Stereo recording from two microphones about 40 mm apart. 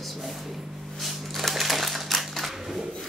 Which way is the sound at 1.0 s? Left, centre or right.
Centre.